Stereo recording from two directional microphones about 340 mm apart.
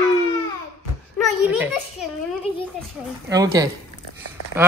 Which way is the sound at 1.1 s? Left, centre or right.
Centre.